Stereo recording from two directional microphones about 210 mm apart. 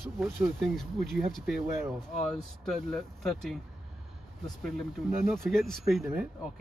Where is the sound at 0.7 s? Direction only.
Centre (ahead or behind).